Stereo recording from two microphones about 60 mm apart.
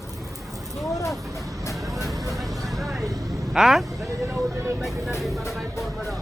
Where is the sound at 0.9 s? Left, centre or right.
Left.